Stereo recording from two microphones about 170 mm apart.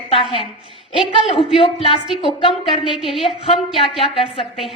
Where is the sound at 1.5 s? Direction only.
30° left (ahead or behind).